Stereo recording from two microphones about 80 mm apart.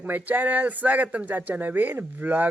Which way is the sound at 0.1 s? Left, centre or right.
Right.